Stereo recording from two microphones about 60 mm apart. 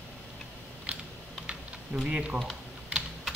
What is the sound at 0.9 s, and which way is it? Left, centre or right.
Typing, centre.